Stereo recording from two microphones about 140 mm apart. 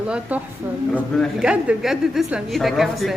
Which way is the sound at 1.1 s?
5° left (ahead or behind).